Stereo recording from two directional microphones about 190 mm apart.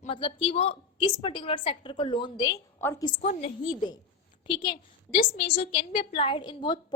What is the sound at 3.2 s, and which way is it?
Speech, 40° left (ahead or behind).